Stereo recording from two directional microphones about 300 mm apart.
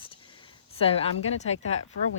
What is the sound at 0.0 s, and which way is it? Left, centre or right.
Speech, centre.